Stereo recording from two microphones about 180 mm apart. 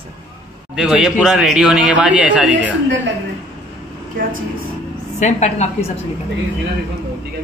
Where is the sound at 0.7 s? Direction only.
5° right (ahead or behind).